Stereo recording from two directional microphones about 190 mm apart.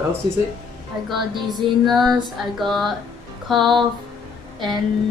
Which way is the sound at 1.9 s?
Centre (ahead or behind).